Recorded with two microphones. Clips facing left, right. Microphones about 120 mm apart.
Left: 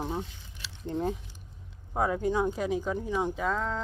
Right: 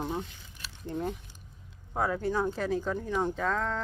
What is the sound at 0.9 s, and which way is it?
Speech, 20° left (ahead or behind).